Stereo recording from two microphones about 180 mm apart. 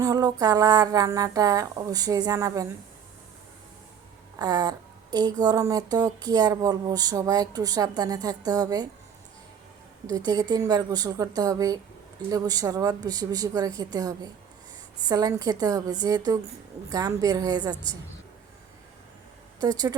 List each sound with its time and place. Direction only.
0.0 s speech: 20° right (ahead or behind)
4.4 s speech: 20° right (ahead or behind)
10.1 s speech: 20° right (ahead or behind)
19.6 s speech: 20° right (ahead or behind)